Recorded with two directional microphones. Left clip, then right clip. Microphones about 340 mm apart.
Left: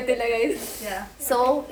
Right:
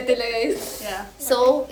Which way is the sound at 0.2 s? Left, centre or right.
Centre.